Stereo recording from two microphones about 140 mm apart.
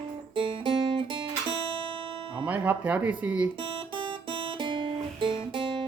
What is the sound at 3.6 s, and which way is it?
Guitar, 35° right (ahead or behind).